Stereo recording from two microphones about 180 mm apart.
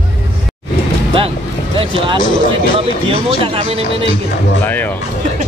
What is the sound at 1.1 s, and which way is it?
Music, 30° right (ahead or behind).